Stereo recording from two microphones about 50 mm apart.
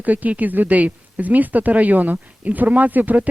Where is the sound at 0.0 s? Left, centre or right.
Right.